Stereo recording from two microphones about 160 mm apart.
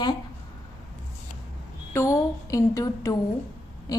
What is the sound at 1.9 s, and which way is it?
A woman's voice, 20° left (ahead or behind).